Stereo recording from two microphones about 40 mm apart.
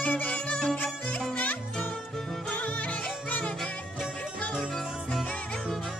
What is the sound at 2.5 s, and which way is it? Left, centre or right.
Music, left.